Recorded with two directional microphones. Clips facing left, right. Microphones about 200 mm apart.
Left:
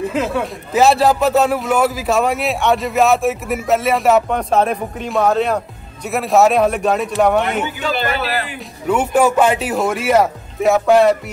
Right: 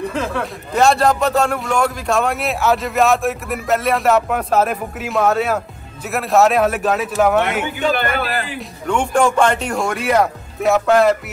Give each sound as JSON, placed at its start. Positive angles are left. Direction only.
{"t": 0.0, "sound": "a man's voice", "side_deg": 5}
{"t": 7.9, "sound": "a man's voice", "side_deg": -50}
{"t": 8.5, "sound": "a man's voice", "side_deg": 5}